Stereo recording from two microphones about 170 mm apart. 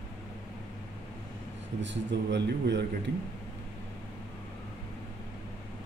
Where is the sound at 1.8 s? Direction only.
90° right.